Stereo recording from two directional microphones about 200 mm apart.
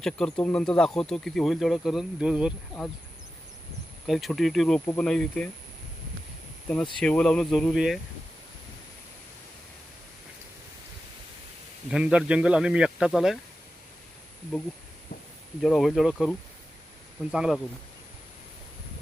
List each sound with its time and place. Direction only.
0.0 s speech: 5° left (ahead or behind)
4.0 s speech: centre (ahead or behind)
7.0 s speech: 5° left (ahead or behind)
11.9 s speech: 5° right (ahead or behind)
15.6 s speech: centre (ahead or behind)
17.3 s speech: 5° right (ahead or behind)